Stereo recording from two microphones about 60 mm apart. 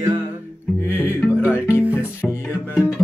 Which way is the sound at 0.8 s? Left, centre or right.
Left.